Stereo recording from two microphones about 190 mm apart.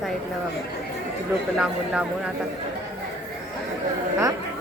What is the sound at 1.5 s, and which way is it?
Speech, 5° right (ahead or behind).